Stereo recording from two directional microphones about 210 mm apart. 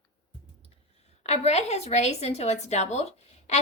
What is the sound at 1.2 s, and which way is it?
A woman's voice, 30° left (ahead or behind).